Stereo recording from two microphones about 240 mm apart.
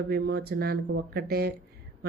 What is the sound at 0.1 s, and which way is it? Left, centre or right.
A woman's voice, right.